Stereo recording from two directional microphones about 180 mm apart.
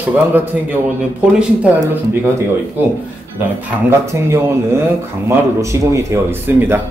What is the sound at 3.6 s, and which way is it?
A man's voice, 15° right (ahead or behind).